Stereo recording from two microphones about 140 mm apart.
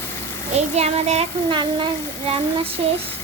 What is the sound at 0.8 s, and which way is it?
Child singing, 50° right (ahead or behind).